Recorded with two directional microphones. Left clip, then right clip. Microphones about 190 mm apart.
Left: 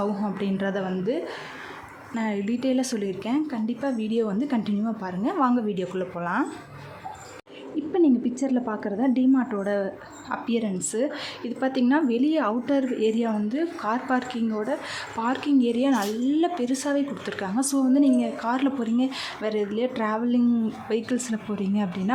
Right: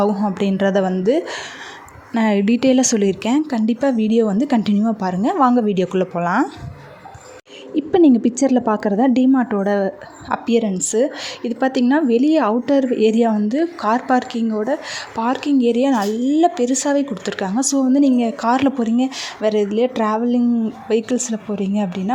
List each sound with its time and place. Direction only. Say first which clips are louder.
0.3 s a woman's voice: right 10 dB; 40° right (ahead or behind)
7.8 s a woman's voice: right 8 dB; 45° right (ahead or behind); by 22.1 s 25° right (ahead or behind)